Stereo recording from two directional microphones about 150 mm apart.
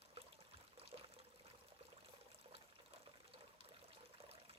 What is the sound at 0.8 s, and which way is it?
Water, 40° right (ahead or behind).